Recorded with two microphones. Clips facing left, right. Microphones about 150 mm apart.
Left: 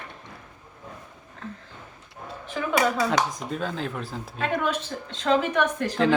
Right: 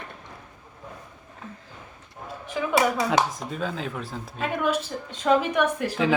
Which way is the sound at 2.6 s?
10° right (ahead or behind).